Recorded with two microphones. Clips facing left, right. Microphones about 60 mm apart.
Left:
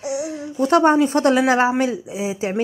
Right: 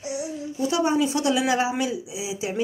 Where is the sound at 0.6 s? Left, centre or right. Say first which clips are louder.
Left 8 dB; left.